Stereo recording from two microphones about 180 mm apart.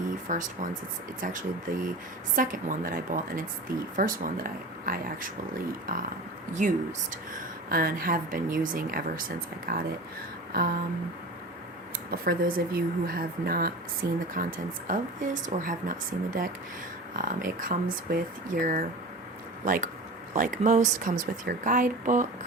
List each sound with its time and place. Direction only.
0.3 s speech: 45° right (ahead or behind)
6.6 s speech: 45° right (ahead or behind)
12.1 s speech: 55° right (ahead or behind)